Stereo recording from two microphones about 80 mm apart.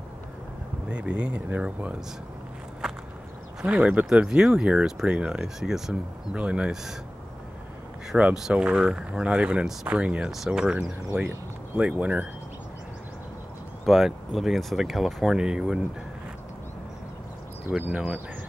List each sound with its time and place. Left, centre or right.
0.8 s speech: centre
2.8 s a sound: centre
3.6 s speech: centre
8.2 s speech: centre
13.8 s speech: centre
17.6 s speech: centre